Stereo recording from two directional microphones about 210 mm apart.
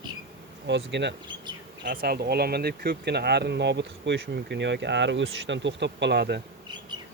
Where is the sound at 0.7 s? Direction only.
55° right (ahead or behind).